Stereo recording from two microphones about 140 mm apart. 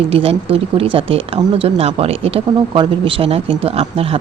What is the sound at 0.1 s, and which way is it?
Speech, 40° right (ahead or behind).